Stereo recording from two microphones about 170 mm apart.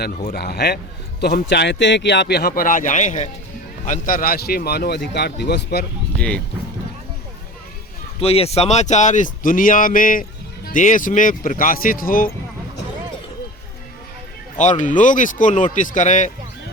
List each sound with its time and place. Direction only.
0.3 s a man's voice: 70° left (ahead or behind)
6.1 s speech: 5° left (ahead or behind)
8.2 s speech: 35° left (ahead or behind); by 12.3 s 55° left (ahead or behind)
14.6 s speech: 45° left (ahead or behind)